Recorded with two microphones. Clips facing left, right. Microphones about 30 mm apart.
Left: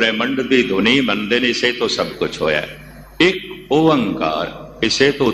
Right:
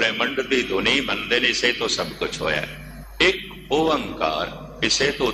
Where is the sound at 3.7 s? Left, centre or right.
Centre.